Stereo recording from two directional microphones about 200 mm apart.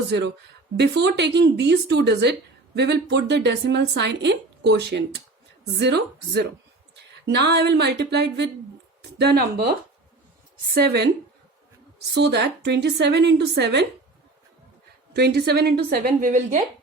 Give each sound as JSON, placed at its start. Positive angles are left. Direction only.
{"t": 0.1, "sound": "speech", "side_deg": -60}
{"t": 9.0, "sound": "a sound", "side_deg": -55}
{"t": 10.8, "sound": "a woman's voice", "side_deg": -55}
{"t": 12.1, "sound": "speech", "side_deg": -60}
{"t": 15.1, "sound": "a woman's voice", "side_deg": -55}